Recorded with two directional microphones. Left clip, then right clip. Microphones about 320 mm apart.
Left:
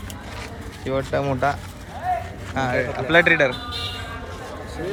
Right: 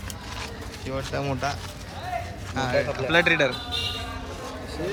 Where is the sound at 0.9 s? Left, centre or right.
Centre.